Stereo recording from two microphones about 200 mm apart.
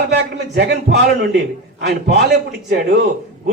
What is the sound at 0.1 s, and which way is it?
A man's voice, 55° right (ahead or behind).